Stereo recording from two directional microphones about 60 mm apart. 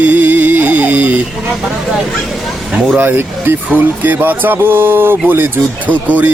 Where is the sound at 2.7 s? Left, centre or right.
Centre.